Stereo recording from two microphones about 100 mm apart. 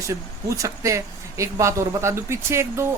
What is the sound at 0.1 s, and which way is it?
A man's voice, 35° right (ahead or behind).